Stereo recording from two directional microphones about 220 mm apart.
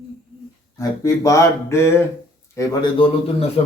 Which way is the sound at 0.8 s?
15° left (ahead or behind).